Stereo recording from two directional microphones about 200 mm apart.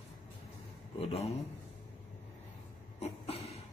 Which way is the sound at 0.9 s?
30° left (ahead or behind).